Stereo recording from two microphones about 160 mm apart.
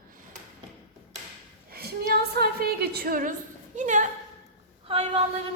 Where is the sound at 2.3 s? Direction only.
75° right (ahead or behind).